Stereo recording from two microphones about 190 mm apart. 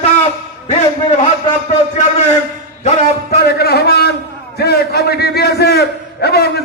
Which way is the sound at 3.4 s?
55° left (ahead or behind).